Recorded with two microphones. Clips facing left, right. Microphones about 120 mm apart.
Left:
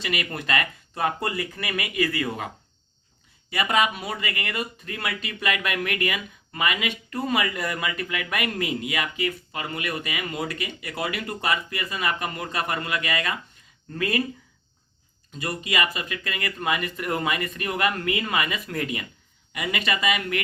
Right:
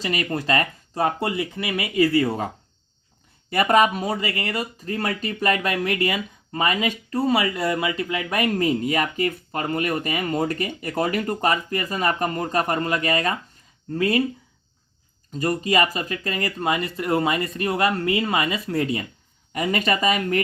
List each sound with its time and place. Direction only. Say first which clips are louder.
0.0 s speech: right 5 dB; 35° right (ahead or behind)
3.5 s speech: right 6 dB; 45° right (ahead or behind)
13.9 s speech: right 5 dB; 25° right (ahead or behind)
15.3 s speech: right 8 dB; 40° right (ahead or behind)